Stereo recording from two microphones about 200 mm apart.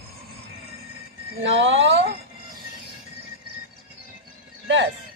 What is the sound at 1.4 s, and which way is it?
Speech, 70° right (ahead or behind).